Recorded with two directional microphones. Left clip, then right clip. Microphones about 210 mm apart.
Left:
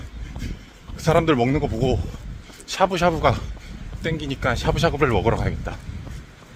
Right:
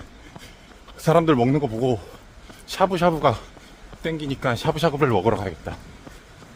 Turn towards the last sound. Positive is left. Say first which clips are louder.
# even
turn(degrees=-15)  # may be behind; listen again after turning